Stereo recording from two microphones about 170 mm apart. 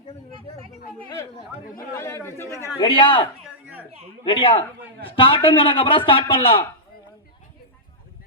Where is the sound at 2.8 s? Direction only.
30° left (ahead or behind).